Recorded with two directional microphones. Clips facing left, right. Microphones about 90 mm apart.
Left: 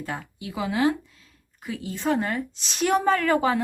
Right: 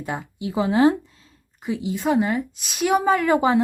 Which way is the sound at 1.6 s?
20° right (ahead or behind).